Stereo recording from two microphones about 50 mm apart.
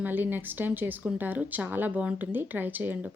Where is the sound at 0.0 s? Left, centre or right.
Right.